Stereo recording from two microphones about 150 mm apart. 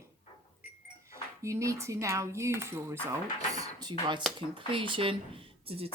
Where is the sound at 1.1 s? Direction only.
20° right (ahead or behind); by 5.8 s 40° right (ahead or behind).